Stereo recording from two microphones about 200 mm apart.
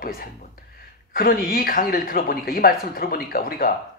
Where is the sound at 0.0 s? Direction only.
45° left (ahead or behind).